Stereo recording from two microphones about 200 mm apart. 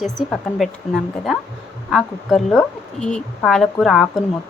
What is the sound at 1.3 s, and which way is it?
Speech, centre (ahead or behind).